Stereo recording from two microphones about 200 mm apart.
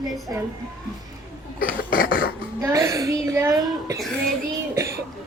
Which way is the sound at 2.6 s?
15° right (ahead or behind).